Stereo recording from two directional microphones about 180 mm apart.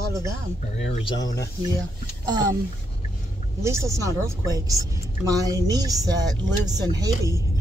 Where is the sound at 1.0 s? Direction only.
20° left (ahead or behind).